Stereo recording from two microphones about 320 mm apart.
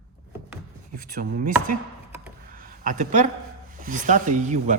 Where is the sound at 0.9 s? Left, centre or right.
Right.